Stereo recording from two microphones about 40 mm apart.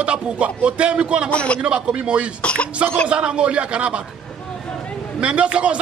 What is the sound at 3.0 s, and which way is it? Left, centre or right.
Speech, right.